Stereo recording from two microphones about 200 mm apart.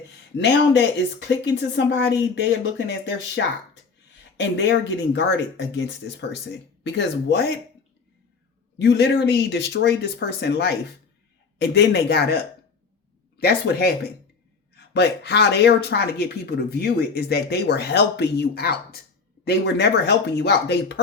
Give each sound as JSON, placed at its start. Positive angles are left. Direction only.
{"t": 0.3, "sound": "speech", "side_deg": 60}
{"t": 8.8, "sound": "speech", "side_deg": 55}